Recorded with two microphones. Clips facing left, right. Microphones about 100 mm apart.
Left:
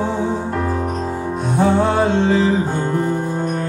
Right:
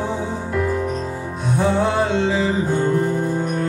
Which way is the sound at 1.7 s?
50° left (ahead or behind).